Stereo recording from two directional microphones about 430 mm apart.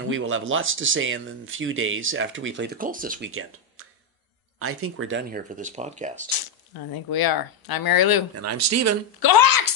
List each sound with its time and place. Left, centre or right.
0.1 s speech: right
6.9 s speech: left
8.4 s speech: right
9.2 s a woman's voice: left